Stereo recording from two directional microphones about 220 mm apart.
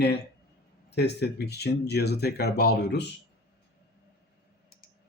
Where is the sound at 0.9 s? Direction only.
50° left (ahead or behind).